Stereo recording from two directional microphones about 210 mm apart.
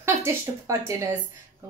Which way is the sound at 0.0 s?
10° right (ahead or behind).